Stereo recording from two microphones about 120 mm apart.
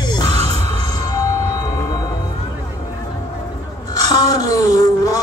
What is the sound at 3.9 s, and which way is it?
Music, 30° left (ahead or behind).